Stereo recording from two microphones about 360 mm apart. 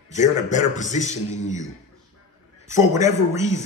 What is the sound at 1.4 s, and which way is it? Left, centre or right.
Speech, centre.